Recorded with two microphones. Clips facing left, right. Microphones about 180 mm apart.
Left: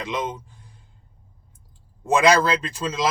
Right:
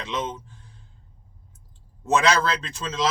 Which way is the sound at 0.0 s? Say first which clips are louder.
Left 2 dB; 15° left (ahead or behind).